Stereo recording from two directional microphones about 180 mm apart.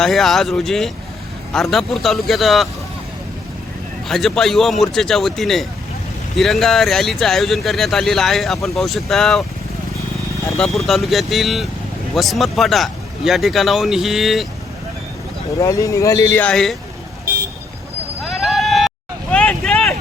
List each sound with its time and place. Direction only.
0.0 s speech: centre (ahead or behind)
4.1 s speech: centre (ahead or behind)
10.6 s speech: centre (ahead or behind)
15.5 s speech: 15° left (ahead or behind)
18.2 s a sound: centre (ahead or behind)